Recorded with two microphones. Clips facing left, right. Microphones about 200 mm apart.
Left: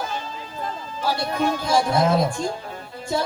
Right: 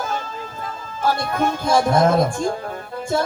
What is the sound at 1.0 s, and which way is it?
Speech, 50° right (ahead or behind).